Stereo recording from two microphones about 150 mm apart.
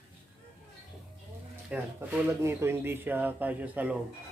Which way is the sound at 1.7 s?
15° right (ahead or behind).